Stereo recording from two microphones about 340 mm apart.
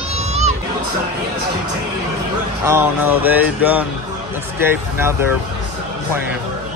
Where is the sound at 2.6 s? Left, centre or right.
Centre.